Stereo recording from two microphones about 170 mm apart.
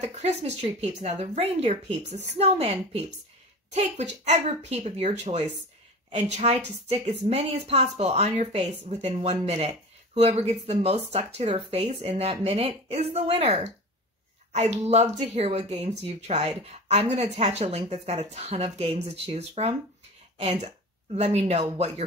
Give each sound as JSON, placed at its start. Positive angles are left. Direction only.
{"t": 0.0, "sound": "speech", "side_deg": -40}